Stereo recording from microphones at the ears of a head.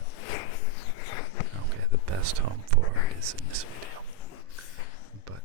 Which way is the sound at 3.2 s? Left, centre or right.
Right.